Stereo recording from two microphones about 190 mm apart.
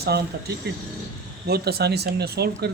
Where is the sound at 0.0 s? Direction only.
55° right (ahead or behind).